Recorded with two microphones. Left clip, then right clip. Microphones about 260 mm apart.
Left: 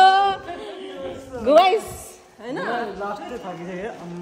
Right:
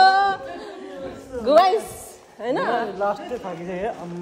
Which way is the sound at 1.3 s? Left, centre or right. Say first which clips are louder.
Even; centre.